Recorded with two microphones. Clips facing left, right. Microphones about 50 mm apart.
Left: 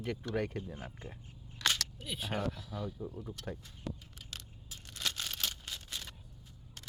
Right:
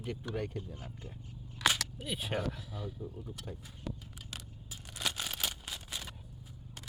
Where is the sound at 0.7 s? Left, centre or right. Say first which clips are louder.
Left 2 dB; left.